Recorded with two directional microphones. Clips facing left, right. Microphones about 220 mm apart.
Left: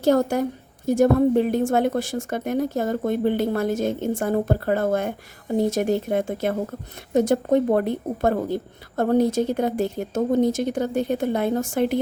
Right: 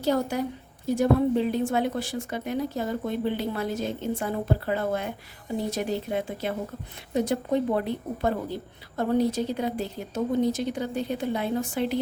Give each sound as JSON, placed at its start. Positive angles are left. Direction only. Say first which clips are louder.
{"t": 0.0, "sound": "a woman's voice", "louder": "left 6 dB", "side_deg": 45}